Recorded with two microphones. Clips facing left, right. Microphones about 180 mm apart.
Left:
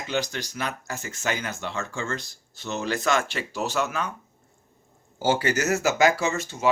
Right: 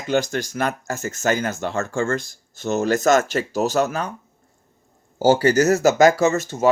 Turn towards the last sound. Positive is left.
turn(degrees=-40)  # may be behind; listen again after turning